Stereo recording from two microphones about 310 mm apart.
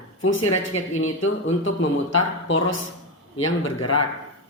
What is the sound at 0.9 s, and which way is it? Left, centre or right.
Speech, left.